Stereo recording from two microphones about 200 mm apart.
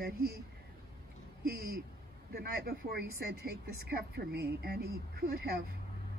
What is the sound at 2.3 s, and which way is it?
Speech, 50° right (ahead or behind).